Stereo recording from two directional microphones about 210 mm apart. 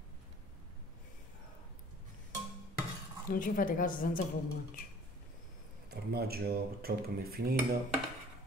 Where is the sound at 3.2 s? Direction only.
40° left (ahead or behind).